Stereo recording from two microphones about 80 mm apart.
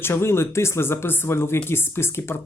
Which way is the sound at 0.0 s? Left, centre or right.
Left.